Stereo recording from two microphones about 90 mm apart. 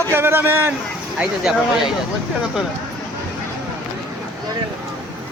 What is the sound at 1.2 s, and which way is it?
Speech, 5° right (ahead or behind).